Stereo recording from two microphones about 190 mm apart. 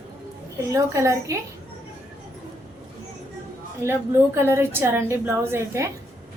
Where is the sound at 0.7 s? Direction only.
15° right (ahead or behind).